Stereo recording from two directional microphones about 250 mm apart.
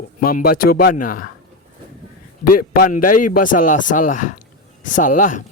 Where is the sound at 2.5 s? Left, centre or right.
Left.